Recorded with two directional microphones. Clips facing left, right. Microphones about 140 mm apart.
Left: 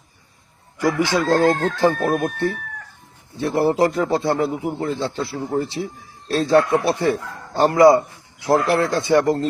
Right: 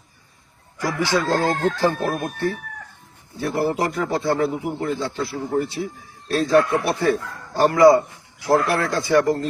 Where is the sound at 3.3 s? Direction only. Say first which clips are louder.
Left 4 dB; 25° left (ahead or behind).